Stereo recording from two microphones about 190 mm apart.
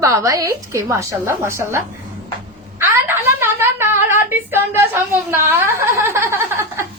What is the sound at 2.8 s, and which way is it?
A woman's voice, 10° right (ahead or behind).